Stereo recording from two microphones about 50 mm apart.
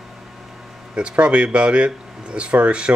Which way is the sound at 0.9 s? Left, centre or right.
Right.